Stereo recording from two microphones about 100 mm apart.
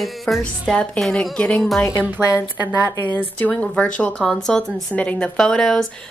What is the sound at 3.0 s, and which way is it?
A woman's voice, 20° left (ahead or behind).